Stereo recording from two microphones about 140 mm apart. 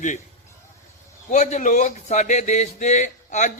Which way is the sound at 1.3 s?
55° left (ahead or behind).